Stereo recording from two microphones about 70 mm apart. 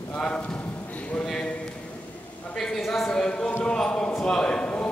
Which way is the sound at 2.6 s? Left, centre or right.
Centre.